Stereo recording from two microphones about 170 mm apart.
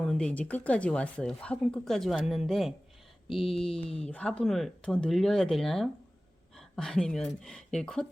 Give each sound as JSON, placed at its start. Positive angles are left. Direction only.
{"t": 0.0, "sound": "speech", "side_deg": 5}
{"t": 3.4, "sound": "speech", "side_deg": 35}
{"t": 3.9, "sound": "speech", "side_deg": 10}